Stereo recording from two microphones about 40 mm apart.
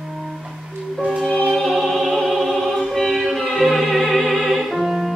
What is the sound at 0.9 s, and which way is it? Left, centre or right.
Music, centre.